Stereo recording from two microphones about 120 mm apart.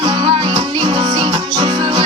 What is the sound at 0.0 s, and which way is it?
Music, 40° right (ahead or behind).